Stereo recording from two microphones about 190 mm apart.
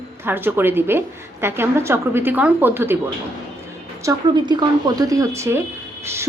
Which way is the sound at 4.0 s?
20° right (ahead or behind).